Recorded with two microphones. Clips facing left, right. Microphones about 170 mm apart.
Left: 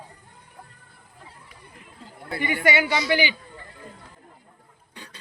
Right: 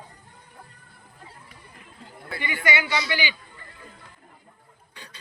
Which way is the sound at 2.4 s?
50° left (ahead or behind).